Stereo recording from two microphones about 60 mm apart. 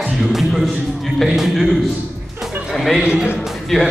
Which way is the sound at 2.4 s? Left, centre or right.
Centre.